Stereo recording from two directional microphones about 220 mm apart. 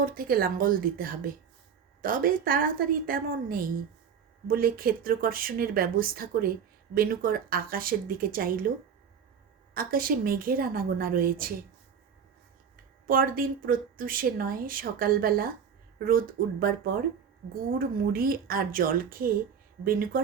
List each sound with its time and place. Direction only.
0.0 s speech: 40° right (ahead or behind)
9.7 s speech: 40° right (ahead or behind)
12.7 s speech: 40° right (ahead or behind)